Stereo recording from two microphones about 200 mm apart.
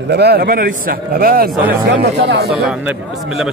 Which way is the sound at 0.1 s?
55° right (ahead or behind).